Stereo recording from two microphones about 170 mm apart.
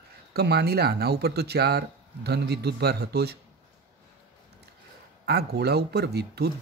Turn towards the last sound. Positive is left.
turn(degrees=-75)  # may be behind; listen again after turning